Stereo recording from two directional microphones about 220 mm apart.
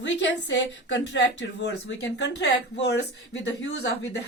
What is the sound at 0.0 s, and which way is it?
Speech, 55° left (ahead or behind).